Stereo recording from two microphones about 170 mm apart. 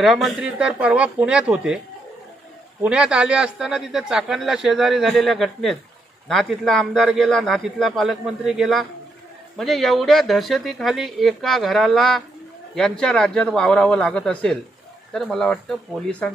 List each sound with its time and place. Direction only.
0.0 s speech: centre (ahead or behind)
2.8 s speech: 5° right (ahead or behind)